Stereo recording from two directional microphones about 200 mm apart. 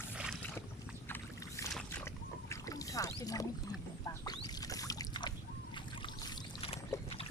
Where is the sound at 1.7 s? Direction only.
5° left (ahead or behind).